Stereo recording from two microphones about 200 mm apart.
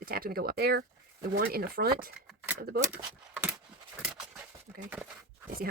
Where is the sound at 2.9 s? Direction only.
10° right (ahead or behind).